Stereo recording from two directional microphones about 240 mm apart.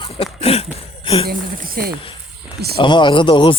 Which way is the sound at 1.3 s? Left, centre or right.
Right.